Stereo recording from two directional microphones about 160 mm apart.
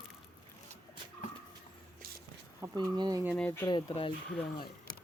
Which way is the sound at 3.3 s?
10° left (ahead or behind).